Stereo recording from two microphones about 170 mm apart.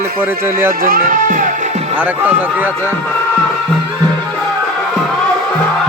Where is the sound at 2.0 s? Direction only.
10° right (ahead or behind).